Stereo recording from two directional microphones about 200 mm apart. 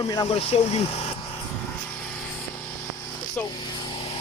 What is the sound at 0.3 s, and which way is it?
Speech, 30° left (ahead or behind).